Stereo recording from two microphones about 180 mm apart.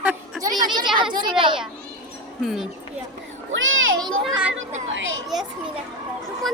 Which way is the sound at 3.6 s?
90° right.